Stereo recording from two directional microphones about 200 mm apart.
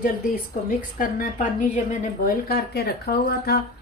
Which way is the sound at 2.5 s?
55° left (ahead or behind).